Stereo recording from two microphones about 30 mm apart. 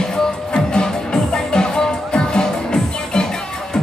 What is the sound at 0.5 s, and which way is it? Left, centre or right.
Music, left.